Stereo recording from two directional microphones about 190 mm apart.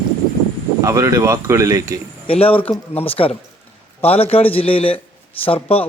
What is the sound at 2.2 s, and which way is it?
Speech, 30° left (ahead or behind).